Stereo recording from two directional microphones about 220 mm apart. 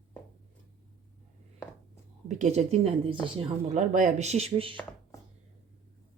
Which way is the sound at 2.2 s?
30° right (ahead or behind).